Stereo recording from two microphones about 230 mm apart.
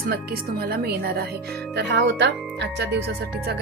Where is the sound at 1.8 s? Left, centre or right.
Right.